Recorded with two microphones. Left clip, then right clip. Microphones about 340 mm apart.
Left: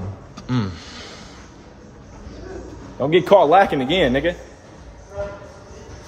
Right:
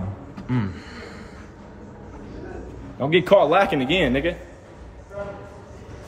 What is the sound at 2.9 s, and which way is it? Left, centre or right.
A man's voice, centre.